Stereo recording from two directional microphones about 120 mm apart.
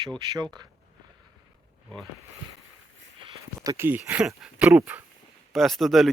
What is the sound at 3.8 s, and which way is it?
A man's voice, 15° right (ahead or behind).